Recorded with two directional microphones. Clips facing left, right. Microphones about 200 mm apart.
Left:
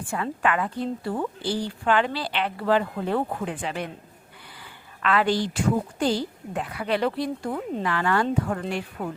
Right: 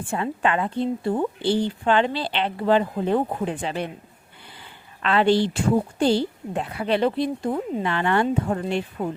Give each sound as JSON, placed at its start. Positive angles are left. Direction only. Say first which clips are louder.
{"t": 0.1, "sound": "a woman's voice", "louder": "right 2 dB", "side_deg": -25}